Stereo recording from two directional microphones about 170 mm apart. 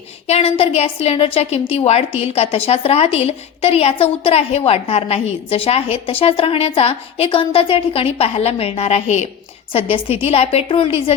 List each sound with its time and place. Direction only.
0.3 s a woman's voice: 35° left (ahead or behind)